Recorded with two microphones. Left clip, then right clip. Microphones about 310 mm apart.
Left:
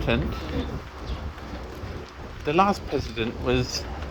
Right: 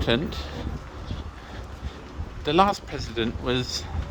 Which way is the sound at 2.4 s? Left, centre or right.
Centre.